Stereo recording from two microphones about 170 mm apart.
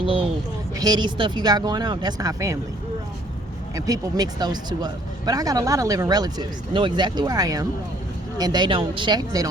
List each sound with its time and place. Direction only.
0.0 s a sound: 30° right (ahead or behind)
0.8 s speech: 25° right (ahead or behind)
3.8 s speech: 20° right (ahead or behind)